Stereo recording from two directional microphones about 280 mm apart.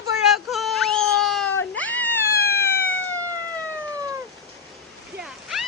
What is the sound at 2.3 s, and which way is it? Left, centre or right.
Cat, left.